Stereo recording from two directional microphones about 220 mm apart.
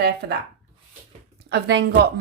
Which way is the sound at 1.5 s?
50° right (ahead or behind).